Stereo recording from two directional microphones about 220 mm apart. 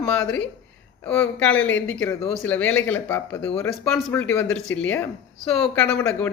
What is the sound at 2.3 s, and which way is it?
Speech, 5° left (ahead or behind).